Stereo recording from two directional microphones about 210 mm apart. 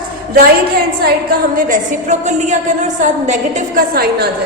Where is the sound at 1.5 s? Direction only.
40° right (ahead or behind).